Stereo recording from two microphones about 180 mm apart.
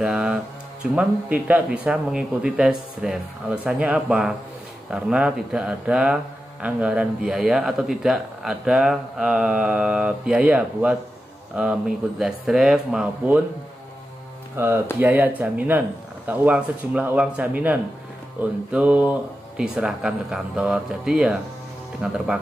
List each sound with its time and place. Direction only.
0.0 s music: 5° right (ahead or behind)
0.9 s speech: 5° right (ahead or behind)
14.6 s speech: 15° right (ahead or behind)